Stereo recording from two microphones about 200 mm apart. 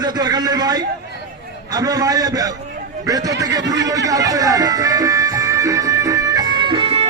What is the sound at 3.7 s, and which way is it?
Music, 15° right (ahead or behind).